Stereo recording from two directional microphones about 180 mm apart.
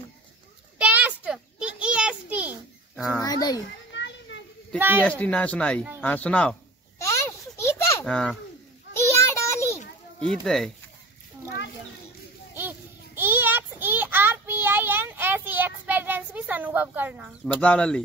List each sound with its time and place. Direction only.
0.7 s a sound: 10° right (ahead or behind)
3.1 s a sound: 20° left (ahead or behind)
3.9 s children playing: 80° left
4.7 s speech: 10° right (ahead or behind)
5.0 s speech: 10° left (ahead or behind)
7.0 s a sound: 15° left (ahead or behind)
8.0 s a child's voice: 5° left (ahead or behind)
9.2 s child singing: 15° left (ahead or behind)
10.4 s speech: centre (ahead or behind)
12.5 s child singing: 10° right (ahead or behind)
17.6 s speech: 5° left (ahead or behind)